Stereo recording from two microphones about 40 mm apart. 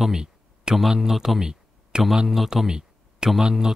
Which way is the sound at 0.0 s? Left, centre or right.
Centre.